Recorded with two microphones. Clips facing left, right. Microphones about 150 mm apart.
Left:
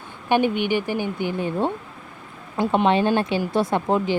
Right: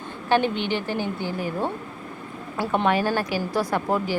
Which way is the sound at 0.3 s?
15° left (ahead or behind).